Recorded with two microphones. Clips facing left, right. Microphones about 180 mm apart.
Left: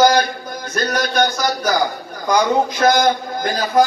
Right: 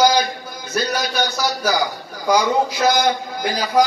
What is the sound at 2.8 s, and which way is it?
Speech, 50° left (ahead or behind).